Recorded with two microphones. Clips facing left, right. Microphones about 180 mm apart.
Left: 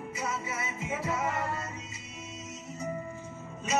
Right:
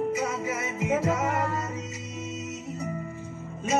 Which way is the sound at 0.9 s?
90° right.